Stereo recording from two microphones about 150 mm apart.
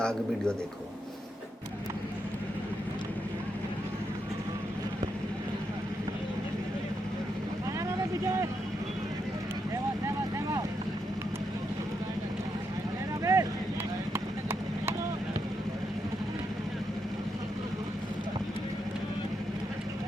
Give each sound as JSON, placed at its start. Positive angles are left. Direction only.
{"t": 0.0, "sound": "a man's voice", "side_deg": 5}
{"t": 7.9, "sound": "vehicle", "side_deg": -20}
{"t": 13.2, "sound": "vehicle", "side_deg": -20}